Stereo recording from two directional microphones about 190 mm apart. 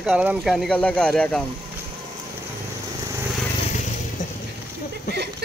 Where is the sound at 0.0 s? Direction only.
5° right (ahead or behind).